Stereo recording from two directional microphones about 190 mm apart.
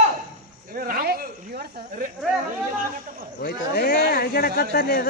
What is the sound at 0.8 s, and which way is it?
Speech, 50° right (ahead or behind).